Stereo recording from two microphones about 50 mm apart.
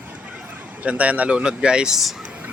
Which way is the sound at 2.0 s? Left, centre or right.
Centre.